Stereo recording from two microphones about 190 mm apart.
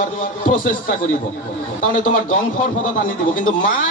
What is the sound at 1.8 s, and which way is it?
Speech, 45° left (ahead or behind).